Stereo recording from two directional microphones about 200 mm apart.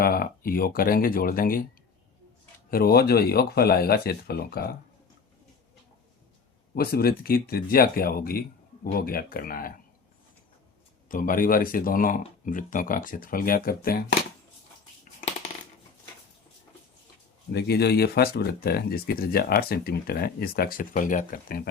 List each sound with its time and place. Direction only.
0.0 s speech: 45° left (ahead or behind)
2.6 s speech: 50° left (ahead or behind)
6.7 s speech: 50° left (ahead or behind)
11.1 s speech: 45° left (ahead or behind)
17.5 s speech: 55° left (ahead or behind)